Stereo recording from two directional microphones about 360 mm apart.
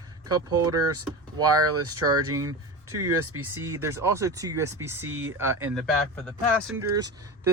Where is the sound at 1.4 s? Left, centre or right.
Right.